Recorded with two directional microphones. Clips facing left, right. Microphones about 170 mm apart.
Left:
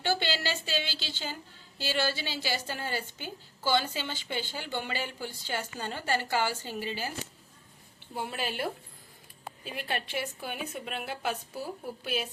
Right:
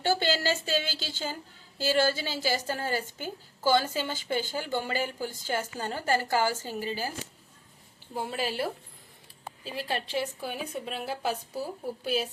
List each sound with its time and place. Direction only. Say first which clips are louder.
0.0 s a woman's voice: right 4 dB; 40° right (ahead or behind)
8.1 s speech: right 3 dB; 35° right (ahead or behind)